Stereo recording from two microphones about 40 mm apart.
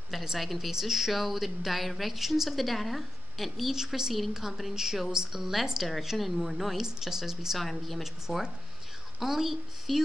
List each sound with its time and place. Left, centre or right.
0.1 s speech: centre
3.7 s speech: centre
7.5 s speech: centre